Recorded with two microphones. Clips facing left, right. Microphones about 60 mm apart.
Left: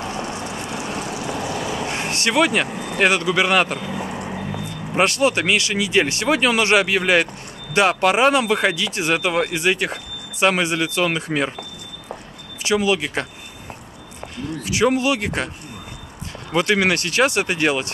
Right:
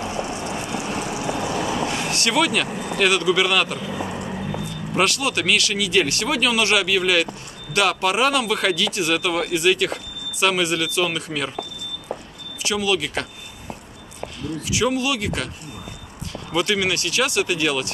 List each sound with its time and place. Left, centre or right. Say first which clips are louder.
0.0 s vehicle: even; left
1.9 s speech: left 1 dB; left
3.9 s vehicle: even; centre
4.3 s speech: even; left
12.6 s speech: left 3 dB; left
14.7 s speech: left 4 dB; left
16.5 s speech: left 3 dB; left